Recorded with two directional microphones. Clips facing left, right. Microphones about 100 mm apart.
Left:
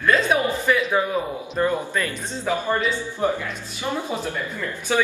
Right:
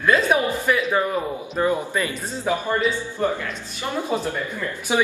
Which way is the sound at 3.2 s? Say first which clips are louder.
Even; 10° left (ahead or behind).